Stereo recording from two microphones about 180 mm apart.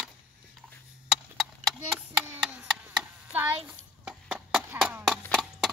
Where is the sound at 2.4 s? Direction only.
5° right (ahead or behind).